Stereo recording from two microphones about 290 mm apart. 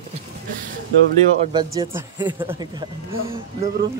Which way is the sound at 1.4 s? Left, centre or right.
Centre.